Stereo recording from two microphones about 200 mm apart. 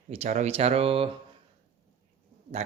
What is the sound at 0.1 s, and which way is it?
Speech, 35° right (ahead or behind).